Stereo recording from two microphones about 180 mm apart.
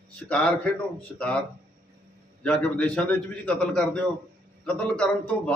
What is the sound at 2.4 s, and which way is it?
A man's voice, 5° left (ahead or behind).